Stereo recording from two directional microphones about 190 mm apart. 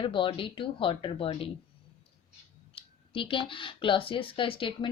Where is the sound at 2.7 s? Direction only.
30° left (ahead or behind).